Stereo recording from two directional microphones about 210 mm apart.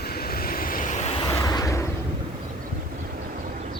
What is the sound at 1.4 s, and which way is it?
Vehicle, 15° left (ahead or behind).